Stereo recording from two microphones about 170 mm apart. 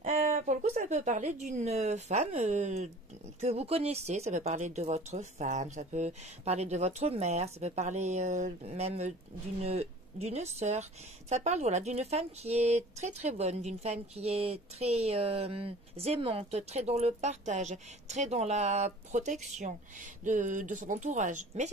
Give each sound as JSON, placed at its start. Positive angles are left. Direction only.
{"t": 0.0, "sound": "a woman's voice", "side_deg": -40}